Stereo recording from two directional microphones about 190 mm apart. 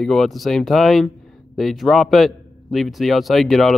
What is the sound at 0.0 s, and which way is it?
A man's voice, centre (ahead or behind).